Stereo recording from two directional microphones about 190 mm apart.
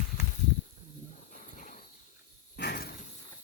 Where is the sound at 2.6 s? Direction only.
55° left (ahead or behind).